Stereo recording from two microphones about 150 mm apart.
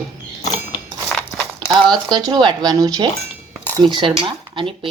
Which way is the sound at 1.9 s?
30° right (ahead or behind).